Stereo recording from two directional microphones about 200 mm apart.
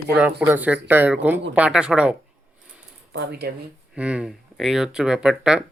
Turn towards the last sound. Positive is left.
turn(degrees=-5)  # may be behind; listen again after turning